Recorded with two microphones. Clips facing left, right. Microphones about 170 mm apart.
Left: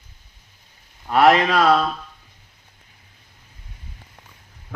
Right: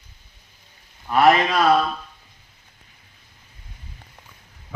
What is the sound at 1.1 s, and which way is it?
Speech, 70° left (ahead or behind).